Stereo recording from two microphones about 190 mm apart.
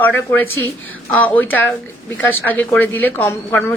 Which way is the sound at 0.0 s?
10° left (ahead or behind).